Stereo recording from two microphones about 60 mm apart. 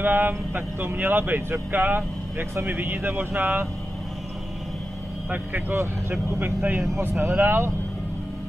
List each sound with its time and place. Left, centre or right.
0.0 s speech: right
5.3 s speech: right